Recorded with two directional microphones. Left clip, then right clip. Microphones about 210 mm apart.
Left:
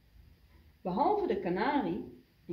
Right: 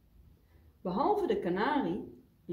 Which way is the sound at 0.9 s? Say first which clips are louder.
Even; 30° right (ahead or behind).